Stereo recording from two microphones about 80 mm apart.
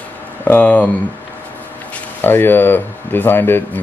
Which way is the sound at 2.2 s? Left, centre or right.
Left.